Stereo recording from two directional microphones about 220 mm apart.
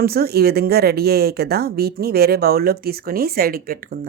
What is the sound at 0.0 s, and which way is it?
Speech, 45° right (ahead or behind).